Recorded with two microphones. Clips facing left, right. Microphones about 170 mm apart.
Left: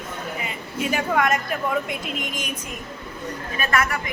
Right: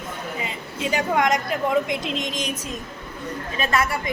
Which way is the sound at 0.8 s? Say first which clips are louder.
Right 1 dB; 20° right (ahead or behind).